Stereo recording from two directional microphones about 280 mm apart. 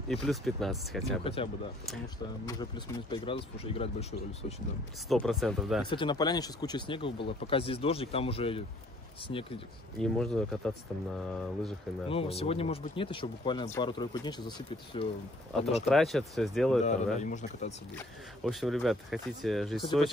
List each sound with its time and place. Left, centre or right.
0.1 s speech: centre
1.2 s speech: centre
5.0 s speech: centre
5.9 s speech: centre
9.9 s speech: centre
12.1 s speech: left
15.9 s speech: centre
16.8 s speech: left
17.9 s speech: centre